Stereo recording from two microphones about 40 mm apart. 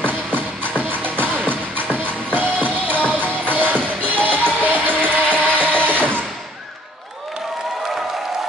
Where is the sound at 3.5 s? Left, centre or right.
Right.